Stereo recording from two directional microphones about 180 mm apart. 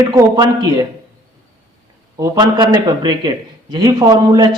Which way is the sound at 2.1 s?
20° right (ahead or behind).